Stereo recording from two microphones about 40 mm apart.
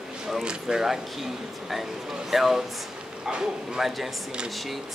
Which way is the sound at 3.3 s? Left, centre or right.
Right.